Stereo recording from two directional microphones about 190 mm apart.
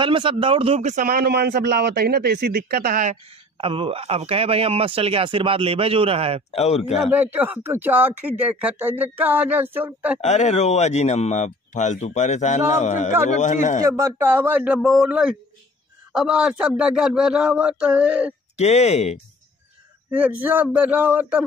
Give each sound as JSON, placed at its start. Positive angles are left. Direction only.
{"t": 0.0, "sound": "speech", "side_deg": -25}
{"t": 3.5, "sound": "a man's voice", "side_deg": -30}
{"t": 6.5, "sound": "speech", "side_deg": 35}
{"t": 7.1, "sound": "speech", "side_deg": -10}
{"t": 10.2, "sound": "speech", "side_deg": 35}
{"t": 13.8, "sound": "a man's voice", "side_deg": -15}
{"t": 18.6, "sound": "speech", "side_deg": 35}
{"t": 20.1, "sound": "speech", "side_deg": -5}